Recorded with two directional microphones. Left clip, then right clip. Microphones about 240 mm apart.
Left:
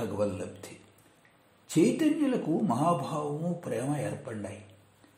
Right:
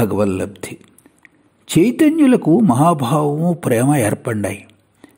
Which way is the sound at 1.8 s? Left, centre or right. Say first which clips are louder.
Right 12 dB; right.